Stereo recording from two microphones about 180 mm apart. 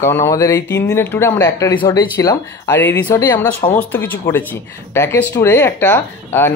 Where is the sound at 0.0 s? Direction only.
15° left (ahead or behind).